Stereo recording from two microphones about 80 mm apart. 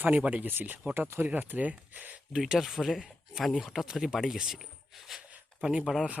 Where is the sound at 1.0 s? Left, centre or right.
Right.